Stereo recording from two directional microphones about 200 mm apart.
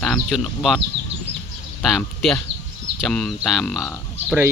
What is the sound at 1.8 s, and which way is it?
Speech, centre (ahead or behind).